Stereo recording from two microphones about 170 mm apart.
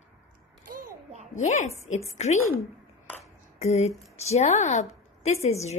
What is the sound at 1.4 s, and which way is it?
Speech, 40° left (ahead or behind).